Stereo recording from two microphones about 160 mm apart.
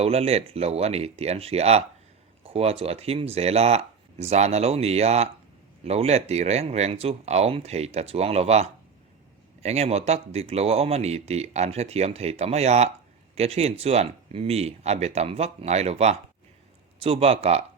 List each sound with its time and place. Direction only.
0.0 s speech: 40° right (ahead or behind)